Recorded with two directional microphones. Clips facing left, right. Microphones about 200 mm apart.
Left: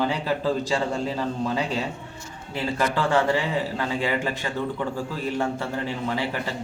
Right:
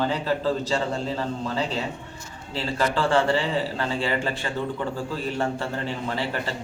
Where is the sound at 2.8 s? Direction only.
15° left (ahead or behind).